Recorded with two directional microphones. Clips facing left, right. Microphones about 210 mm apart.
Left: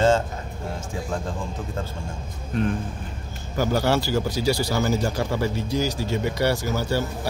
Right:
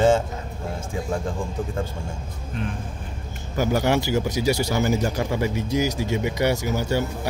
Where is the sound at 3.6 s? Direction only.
15° right (ahead or behind).